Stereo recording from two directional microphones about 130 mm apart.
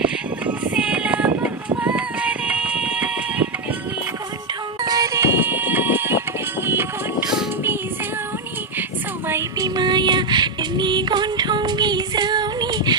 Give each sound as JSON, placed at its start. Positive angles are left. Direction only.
{"t": 0.0, "sound": "music", "side_deg": -10}
{"t": 4.8, "sound": "music", "side_deg": -30}
{"t": 9.2, "sound": "music", "side_deg": -20}
{"t": 9.6, "sound": "music", "side_deg": -35}